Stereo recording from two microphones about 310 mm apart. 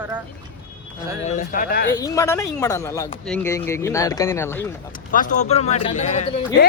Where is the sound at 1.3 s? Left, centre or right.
Left.